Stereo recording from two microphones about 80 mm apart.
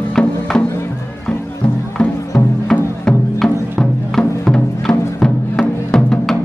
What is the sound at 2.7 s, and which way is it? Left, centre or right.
Music, centre.